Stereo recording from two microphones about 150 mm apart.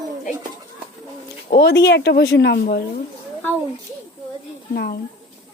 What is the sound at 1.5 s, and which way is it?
Speech, 90° left.